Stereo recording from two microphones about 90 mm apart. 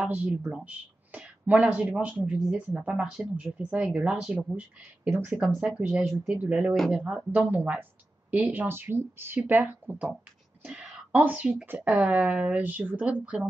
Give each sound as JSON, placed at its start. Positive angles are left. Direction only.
{"t": 0.0, "sound": "speech", "side_deg": -15}
{"t": 0.3, "sound": "speech", "side_deg": 0}
{"t": 0.7, "sound": "speech", "side_deg": -15}
{"t": 6.8, "sound": "speech", "side_deg": 5}
{"t": 7.3, "sound": "speech", "side_deg": -15}
{"t": 10.6, "sound": "a sound", "side_deg": -15}
{"t": 11.6, "sound": "speech", "side_deg": -20}